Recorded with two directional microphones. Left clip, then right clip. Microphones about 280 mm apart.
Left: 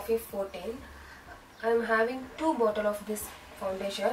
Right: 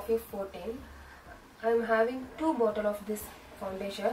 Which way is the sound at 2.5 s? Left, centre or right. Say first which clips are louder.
Left 1 dB; centre.